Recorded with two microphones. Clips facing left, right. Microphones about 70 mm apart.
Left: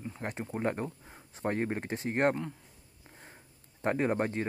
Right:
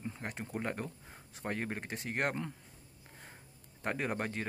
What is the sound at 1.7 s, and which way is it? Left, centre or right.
Speech, left.